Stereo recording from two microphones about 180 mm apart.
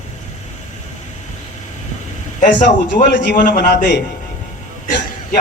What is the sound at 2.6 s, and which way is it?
Speech, 45° left (ahead or behind).